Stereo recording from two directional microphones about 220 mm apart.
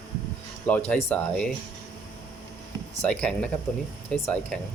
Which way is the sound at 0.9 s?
5° left (ahead or behind).